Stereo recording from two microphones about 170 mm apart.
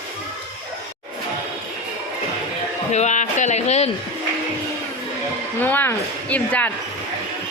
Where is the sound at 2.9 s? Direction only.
45° left (ahead or behind).